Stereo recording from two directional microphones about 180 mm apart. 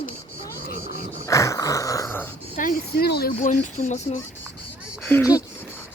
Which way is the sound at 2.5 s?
50° left (ahead or behind).